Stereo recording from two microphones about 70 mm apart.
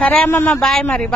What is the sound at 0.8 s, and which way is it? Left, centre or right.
Speech, centre.